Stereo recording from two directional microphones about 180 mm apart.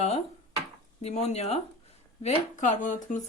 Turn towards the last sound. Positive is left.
turn(degrees=45)  # may be behind; listen again after turning